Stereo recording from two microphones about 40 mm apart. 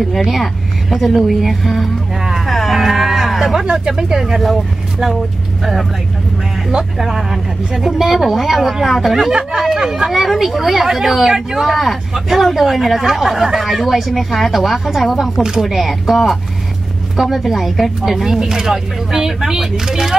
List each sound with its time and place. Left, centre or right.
0.3 s speech: centre
2.4 s a sound: centre
3.7 s speech: centre
7.0 s speech: centre
8.8 s speech: centre
9.6 s speech: centre
10.1 s speech: centre
15.3 s speech: centre
15.6 s speech: centre
17.2 s speech: centre